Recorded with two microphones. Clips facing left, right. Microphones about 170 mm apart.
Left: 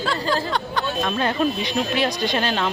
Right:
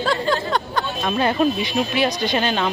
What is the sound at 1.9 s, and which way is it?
Speech, 5° right (ahead or behind).